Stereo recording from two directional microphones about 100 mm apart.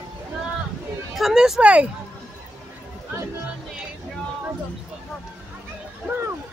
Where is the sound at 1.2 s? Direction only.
Centre (ahead or behind).